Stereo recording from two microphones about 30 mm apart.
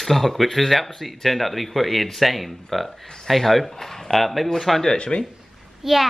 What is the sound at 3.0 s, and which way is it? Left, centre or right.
Speech, left.